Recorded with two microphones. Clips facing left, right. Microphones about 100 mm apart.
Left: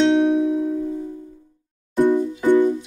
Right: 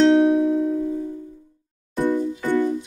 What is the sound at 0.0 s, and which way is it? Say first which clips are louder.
Music: right 1 dB; centre (ahead or behind).